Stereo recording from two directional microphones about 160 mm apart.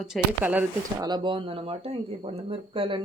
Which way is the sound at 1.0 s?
25° right (ahead or behind).